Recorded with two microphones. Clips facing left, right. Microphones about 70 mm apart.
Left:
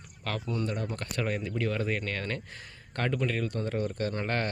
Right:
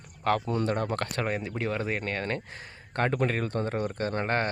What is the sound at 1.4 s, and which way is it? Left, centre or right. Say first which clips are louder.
Speech: even; right.